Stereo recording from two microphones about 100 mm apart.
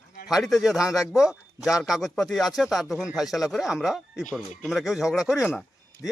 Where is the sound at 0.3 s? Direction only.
Centre (ahead or behind).